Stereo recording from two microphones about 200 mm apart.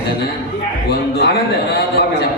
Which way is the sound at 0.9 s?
55° left (ahead or behind).